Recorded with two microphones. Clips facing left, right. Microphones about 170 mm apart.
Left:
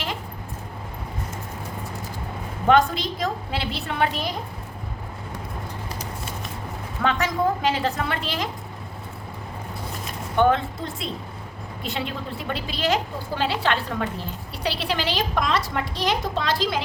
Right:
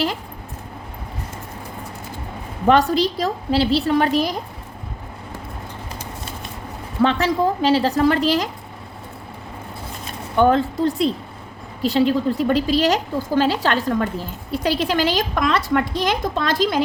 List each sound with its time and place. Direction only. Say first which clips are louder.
2.6 s a woman's voice: right 3 dB; 35° right (ahead or behind)
7.0 s a woman's voice: right 5 dB; 30° right (ahead or behind)
10.5 s a woman's voice: right 7 dB; 35° right (ahead or behind)